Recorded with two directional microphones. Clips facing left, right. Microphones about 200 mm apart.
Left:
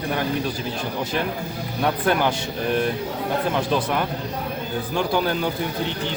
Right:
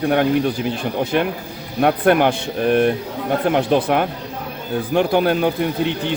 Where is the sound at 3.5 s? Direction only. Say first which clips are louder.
Right 6 dB; 55° right (ahead or behind).